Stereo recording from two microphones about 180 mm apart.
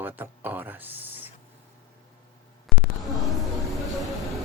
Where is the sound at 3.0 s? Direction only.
Centre (ahead or behind).